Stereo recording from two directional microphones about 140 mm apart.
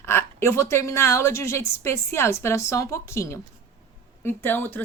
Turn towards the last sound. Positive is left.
turn(degrees=15)  # may be behind; listen again after turning